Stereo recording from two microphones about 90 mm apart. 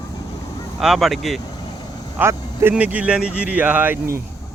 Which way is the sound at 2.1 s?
25° right (ahead or behind).